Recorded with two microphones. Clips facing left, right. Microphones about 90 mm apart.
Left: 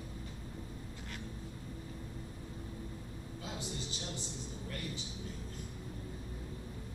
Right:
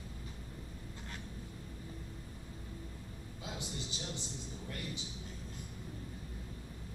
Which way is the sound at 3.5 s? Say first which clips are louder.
Even; 20° right (ahead or behind).